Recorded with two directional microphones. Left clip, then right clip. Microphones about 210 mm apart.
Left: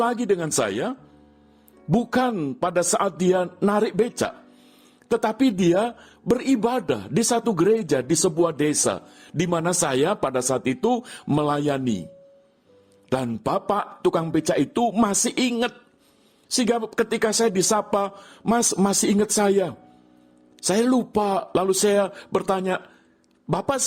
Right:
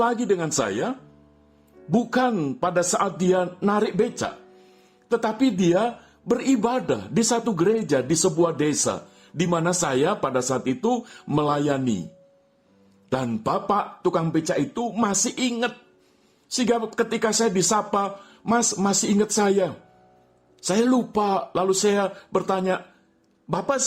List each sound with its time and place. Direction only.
0.0 s speech: 35° left (ahead or behind)
2.3 s speech: 20° left (ahead or behind)
2.6 s speech: 35° left (ahead or behind)
13.1 s speech: 30° left (ahead or behind)